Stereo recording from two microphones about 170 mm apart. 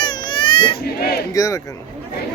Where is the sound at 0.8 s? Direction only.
65° left (ahead or behind).